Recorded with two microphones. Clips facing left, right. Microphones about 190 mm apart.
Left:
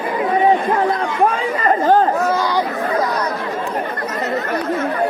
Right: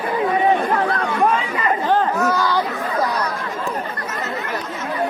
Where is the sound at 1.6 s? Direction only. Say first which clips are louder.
Left 7 dB; 45° left (ahead or behind).